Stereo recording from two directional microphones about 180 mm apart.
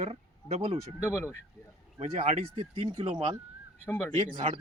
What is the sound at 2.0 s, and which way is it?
Speech, 35° right (ahead or behind).